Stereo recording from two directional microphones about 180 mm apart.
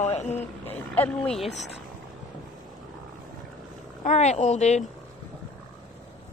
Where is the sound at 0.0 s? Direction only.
40° left (ahead or behind).